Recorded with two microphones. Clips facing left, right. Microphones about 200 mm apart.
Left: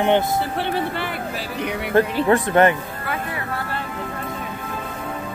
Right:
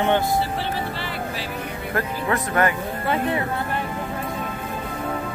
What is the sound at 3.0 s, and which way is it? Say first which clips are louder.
Speech: right 5 dB; 25° right (ahead or behind).